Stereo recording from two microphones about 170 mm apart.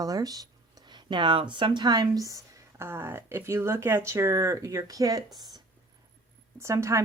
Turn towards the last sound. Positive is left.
turn(degrees=-15)  # may be behind; listen again after turning